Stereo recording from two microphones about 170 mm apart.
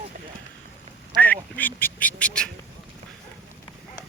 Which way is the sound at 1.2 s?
10° left (ahead or behind).